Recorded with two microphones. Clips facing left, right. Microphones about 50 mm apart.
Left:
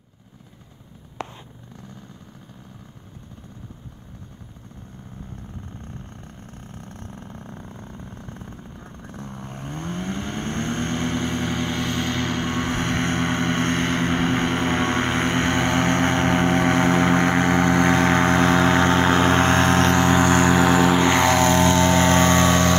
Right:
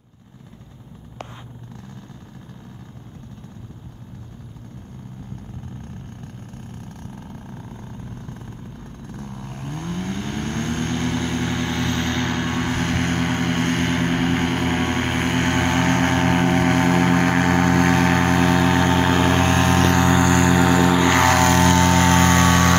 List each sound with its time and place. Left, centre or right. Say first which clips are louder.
6.7 s vehicle: right 2 dB; left
7.5 s vehicle: right 2 dB; centre; by 15.4 s left
15.4 s vehicle: right 1 dB; right
16.5 s vehicle: right 1 dB; left
20.0 s vehicle: even; centre
22.2 s vehicle: right 1 dB; centre